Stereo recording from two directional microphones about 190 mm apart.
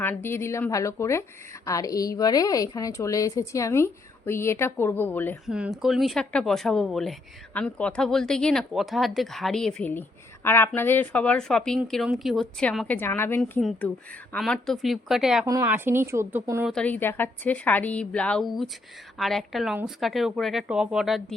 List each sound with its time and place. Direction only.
0.0 s a woman's voice: 10° left (ahead or behind)
5.5 s a woman's voice: 5° right (ahead or behind); by 13.6 s 10° left (ahead or behind)
13.6 s a woman's voice: centre (ahead or behind)
15.4 s speech: 15° right (ahead or behind)
16.7 s a woman's voice: 10° left (ahead or behind)